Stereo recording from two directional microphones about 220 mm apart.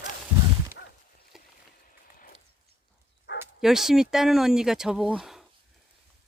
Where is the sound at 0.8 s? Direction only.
50° left (ahead or behind).